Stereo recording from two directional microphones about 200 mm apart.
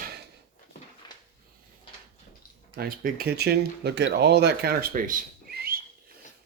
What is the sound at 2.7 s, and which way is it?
Speech, 45° right (ahead or behind).